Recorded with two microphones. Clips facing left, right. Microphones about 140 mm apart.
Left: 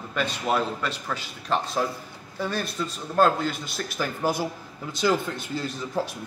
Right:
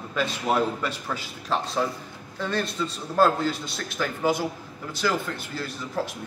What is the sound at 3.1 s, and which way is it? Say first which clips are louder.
Speech: even; 5° right (ahead or behind).